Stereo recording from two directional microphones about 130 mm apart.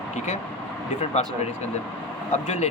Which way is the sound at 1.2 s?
60° left (ahead or behind).